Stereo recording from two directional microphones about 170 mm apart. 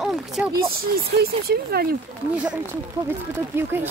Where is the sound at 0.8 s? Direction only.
65° right (ahead or behind).